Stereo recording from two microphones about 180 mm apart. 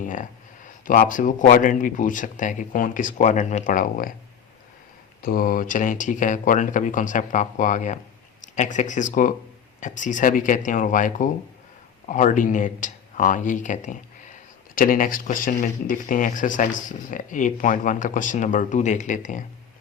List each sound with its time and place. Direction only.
0.0 s speech: 45° left (ahead or behind)
5.2 s speech: 55° left (ahead or behind)